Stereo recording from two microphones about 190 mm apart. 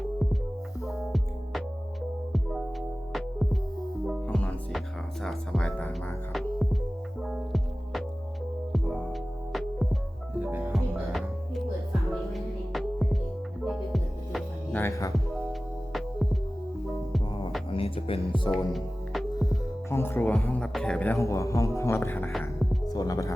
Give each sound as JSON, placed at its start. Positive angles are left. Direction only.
{"t": 0.9, "sound": "music", "side_deg": 0}
{"t": 7.2, "sound": "music", "side_deg": 0}
{"t": 9.5, "sound": "music", "side_deg": 0}
{"t": 14.8, "sound": "music", "side_deg": 15}
{"t": 15.9, "sound": "music", "side_deg": 0}
{"t": 17.7, "sound": "music", "side_deg": 30}
{"t": 18.5, "sound": "music", "side_deg": 0}
{"t": 19.4, "sound": "music", "side_deg": 15}
{"t": 22.3, "sound": "music", "side_deg": 0}
{"t": 22.9, "sound": "music", "side_deg": 20}